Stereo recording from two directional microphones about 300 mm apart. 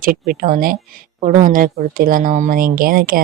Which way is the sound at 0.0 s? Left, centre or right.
Right.